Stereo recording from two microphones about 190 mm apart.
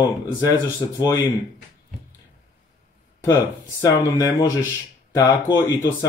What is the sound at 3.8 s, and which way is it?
Speech, 15° left (ahead or behind).